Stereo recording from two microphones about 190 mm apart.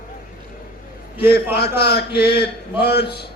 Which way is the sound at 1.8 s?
60° left (ahead or behind).